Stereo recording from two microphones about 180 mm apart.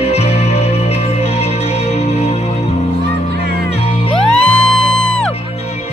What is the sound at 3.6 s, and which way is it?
Music, 35° left (ahead or behind).